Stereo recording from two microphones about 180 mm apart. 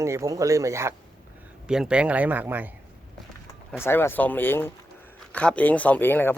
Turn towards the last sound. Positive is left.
turn(degrees=10)  # may be behind; listen again after turning